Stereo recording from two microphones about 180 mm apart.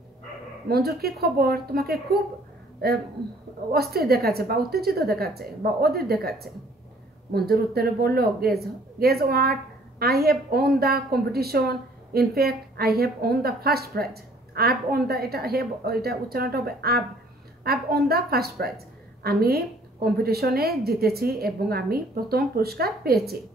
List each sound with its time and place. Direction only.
0.7 s speech: 60° right (ahead or behind)